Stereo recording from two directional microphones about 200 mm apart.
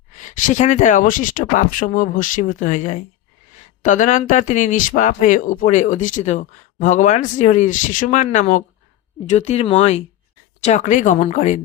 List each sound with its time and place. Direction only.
0.2 s speech: 40° left (ahead or behind)